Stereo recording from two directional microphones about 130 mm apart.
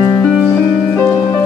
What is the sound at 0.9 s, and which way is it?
Music, 20° left (ahead or behind).